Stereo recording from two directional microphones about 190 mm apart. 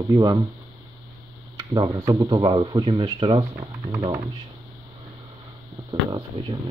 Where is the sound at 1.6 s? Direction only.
20° right (ahead or behind).